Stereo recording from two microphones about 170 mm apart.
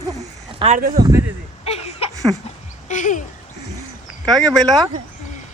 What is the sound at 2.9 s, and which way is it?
Speech, 45° left (ahead or behind).